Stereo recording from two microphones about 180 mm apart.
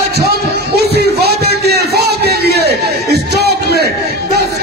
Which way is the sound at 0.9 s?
65° right (ahead or behind).